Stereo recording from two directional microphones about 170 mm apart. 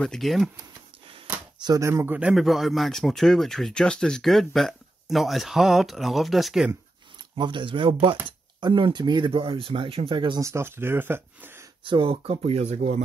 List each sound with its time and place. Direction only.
0.0 s a man's voice: centre (ahead or behind)
1.6 s a man's voice: 20° right (ahead or behind); by 6.7 s centre (ahead or behind)
7.3 s speech: 25° right (ahead or behind)
11.8 s speech: 30° right (ahead or behind)